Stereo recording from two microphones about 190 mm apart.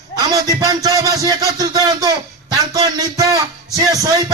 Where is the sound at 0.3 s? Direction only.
20° right (ahead or behind).